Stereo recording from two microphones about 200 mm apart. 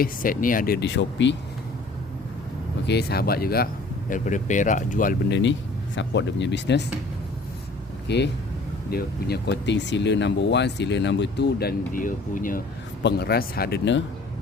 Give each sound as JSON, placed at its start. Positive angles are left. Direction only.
{"t": 0.0, "sound": "speech", "side_deg": 45}
{"t": 2.8, "sound": "speech", "side_deg": 55}
{"t": 4.1, "sound": "speech", "side_deg": 40}
{"t": 5.3, "sound": "speech", "side_deg": 65}
{"t": 8.0, "sound": "speech", "side_deg": 55}
{"t": 13.0, "sound": "speech", "side_deg": 55}